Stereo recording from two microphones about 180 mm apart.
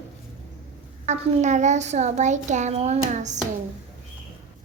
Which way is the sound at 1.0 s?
40° right (ahead or behind).